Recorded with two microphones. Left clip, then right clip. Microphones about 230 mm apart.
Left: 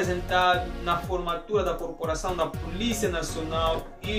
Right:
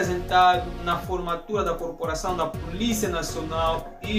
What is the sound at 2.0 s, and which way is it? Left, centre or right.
Speech, centre.